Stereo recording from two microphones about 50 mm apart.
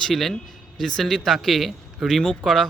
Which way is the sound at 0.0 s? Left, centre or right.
Centre.